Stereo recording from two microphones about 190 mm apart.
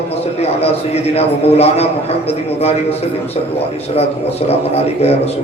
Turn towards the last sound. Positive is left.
turn(degrees=35)  # may be behind; listen again after turning